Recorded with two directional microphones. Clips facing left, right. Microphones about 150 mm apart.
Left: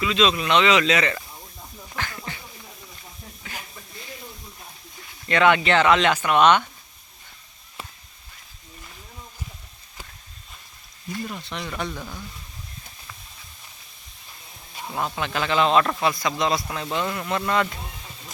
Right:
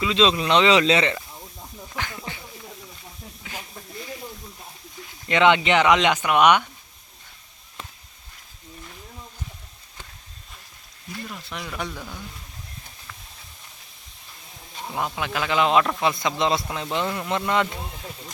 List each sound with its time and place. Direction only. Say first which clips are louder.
0.0 s speech: right 1 dB; 25° right (ahead or behind)
2.0 s a sound: even; 15° right (ahead or behind)
3.4 s snake: right 1 dB; 10° right (ahead or behind)
5.3 s a man's voice: right 1 dB; 20° right (ahead or behind)
11.3 s speech: left 2 dB; 5° right (ahead or behind)
14.9 s a man's voice: even; 10° right (ahead or behind)